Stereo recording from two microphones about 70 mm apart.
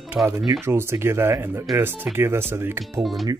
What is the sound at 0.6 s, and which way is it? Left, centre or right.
Speech, right.